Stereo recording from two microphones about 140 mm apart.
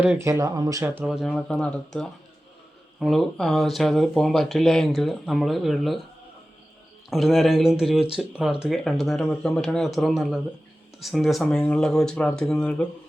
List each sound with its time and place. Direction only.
0.2 s speech: 20° right (ahead or behind)
1.0 s speech: centre (ahead or behind)
7.1 s speech: centre (ahead or behind)